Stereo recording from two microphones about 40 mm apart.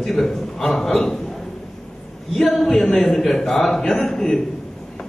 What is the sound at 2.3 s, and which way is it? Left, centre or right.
A man's voice, centre.